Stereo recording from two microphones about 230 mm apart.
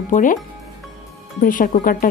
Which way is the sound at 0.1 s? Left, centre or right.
Left.